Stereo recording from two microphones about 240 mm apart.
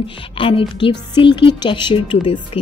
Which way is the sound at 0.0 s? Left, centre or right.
Left.